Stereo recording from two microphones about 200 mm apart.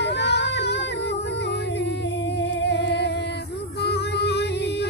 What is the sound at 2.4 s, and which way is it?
Music, 65° left (ahead or behind).